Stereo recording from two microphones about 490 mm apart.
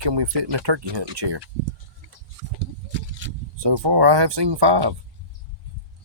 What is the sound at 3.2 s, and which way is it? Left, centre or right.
Vehicle, right.